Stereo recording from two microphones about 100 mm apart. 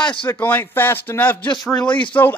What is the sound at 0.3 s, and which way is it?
A man's voice, 15° left (ahead or behind).